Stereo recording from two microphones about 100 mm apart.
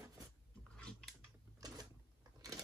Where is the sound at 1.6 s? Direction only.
40° right (ahead or behind).